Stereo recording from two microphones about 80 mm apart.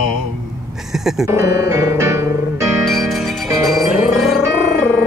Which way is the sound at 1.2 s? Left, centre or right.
Right.